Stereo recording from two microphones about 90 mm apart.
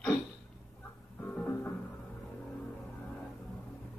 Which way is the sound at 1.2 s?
20° left (ahead or behind).